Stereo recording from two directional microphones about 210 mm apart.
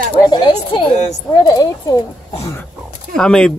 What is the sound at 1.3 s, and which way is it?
Speech, 20° left (ahead or behind).